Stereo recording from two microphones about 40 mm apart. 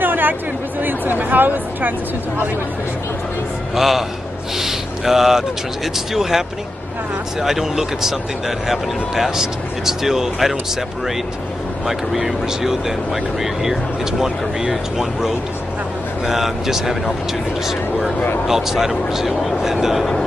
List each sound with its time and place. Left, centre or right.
0.0 s speech: right
3.7 s speech: centre
4.6 s a sound: centre
5.9 s speech: centre
11.8 s speech: centre